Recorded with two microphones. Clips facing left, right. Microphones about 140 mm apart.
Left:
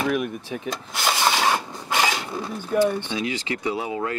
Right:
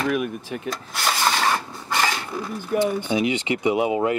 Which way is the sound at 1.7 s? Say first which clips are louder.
Left 1 dB; 10° left (ahead or behind).